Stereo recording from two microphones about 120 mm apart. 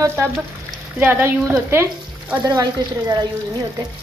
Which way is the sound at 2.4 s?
30° right (ahead or behind).